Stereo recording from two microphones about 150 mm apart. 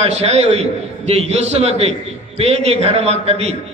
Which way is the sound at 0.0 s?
45° right (ahead or behind).